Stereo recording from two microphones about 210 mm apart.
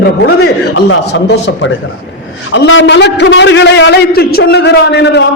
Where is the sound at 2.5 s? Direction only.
65° left (ahead or behind).